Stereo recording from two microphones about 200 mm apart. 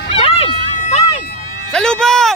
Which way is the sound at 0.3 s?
30° left (ahead or behind).